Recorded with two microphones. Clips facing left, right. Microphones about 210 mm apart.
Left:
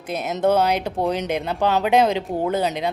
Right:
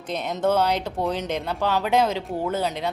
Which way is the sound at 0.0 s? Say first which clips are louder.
Left 3 dB; 5° left (ahead or behind).